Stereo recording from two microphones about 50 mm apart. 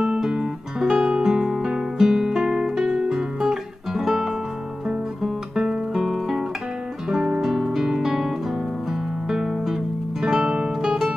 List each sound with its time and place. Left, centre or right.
0.2 s guitar: centre
7.1 s music: centre
7.5 s music: centre
9.3 s music: centre
10.2 s guitar: centre